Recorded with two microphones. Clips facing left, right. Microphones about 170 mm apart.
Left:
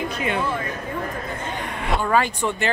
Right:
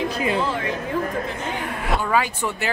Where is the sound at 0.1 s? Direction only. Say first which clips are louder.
Right 2 dB; 30° right (ahead or behind).